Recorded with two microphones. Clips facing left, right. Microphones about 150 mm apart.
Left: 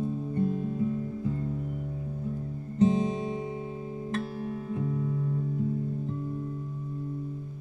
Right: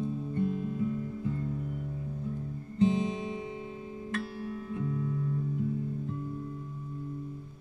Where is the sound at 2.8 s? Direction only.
40° left (ahead or behind).